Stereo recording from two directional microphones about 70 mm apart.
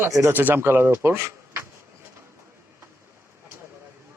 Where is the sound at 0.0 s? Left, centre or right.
Right.